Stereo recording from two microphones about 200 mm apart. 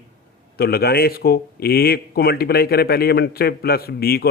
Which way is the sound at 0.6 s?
50° left (ahead or behind).